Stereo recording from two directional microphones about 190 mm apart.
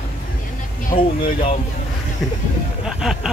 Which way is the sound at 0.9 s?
45° left (ahead or behind).